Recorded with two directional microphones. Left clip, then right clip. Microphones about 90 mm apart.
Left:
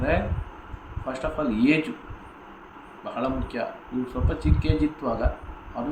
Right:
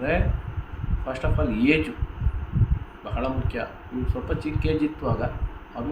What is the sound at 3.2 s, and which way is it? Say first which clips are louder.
A man's voice: left 1 dB; 30° right (ahead or behind).